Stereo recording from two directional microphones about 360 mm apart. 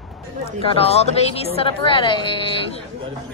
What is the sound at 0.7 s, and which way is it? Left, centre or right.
Speech, centre.